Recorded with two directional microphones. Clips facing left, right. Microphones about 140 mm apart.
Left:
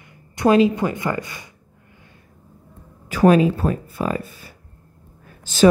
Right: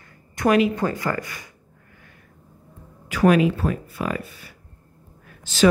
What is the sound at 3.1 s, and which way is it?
Speech, 35° left (ahead or behind).